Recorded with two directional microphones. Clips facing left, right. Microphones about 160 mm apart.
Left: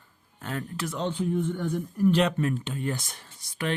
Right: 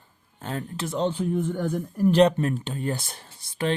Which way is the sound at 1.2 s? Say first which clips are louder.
Right 2 dB; 45° right (ahead or behind).